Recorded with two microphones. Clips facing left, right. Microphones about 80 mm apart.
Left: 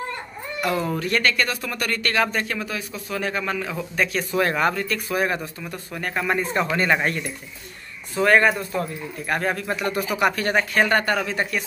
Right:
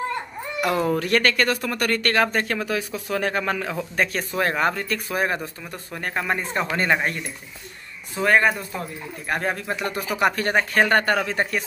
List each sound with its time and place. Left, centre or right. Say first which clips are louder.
0.7 s speech: right 2 dB; right
0.9 s speech: right 2 dB; right
3.9 s speech: left 1 dB; right
4.4 s speech: left 1 dB; right
6.5 s speech: left 2 dB; centre
8.2 s speech: left 2 dB; centre; by 10.5 s right
10.7 s speech: right 3 dB; right